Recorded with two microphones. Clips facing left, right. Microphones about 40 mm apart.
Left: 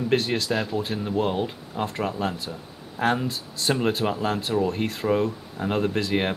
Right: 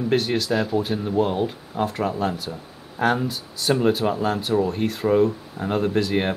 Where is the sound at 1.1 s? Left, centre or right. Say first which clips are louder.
Right 3 dB; centre.